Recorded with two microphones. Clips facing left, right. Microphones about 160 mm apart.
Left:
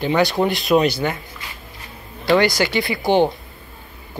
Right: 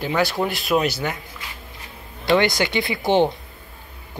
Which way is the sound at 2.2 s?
20° right (ahead or behind).